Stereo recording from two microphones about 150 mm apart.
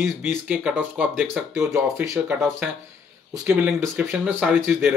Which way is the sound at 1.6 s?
20° right (ahead or behind).